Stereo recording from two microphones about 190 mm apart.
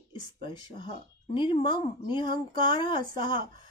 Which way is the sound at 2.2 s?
45° right (ahead or behind).